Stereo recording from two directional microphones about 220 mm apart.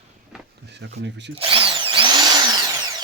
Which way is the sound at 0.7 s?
50° right (ahead or behind).